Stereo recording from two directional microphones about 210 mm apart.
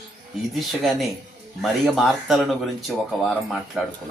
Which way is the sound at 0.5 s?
Centre (ahead or behind).